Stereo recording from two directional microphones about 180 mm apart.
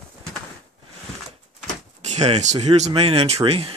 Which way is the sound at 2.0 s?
35° right (ahead or behind).